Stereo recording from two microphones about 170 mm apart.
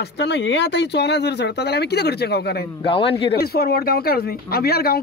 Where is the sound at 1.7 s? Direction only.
75° left (ahead or behind).